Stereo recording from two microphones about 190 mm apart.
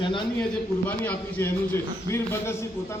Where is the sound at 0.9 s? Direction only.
10° left (ahead or behind).